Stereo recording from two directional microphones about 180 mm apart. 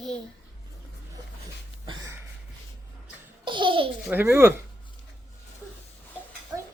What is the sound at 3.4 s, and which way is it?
Babbling, 25° right (ahead or behind).